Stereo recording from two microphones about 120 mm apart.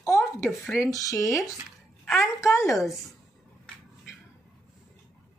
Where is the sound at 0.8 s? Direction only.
30° left (ahead or behind).